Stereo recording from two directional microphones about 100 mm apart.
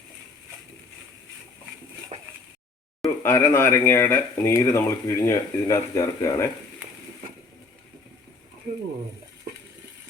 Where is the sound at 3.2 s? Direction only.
25° left (ahead or behind).